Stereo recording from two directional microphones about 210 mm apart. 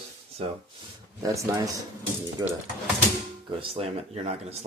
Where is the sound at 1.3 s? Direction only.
15° right (ahead or behind).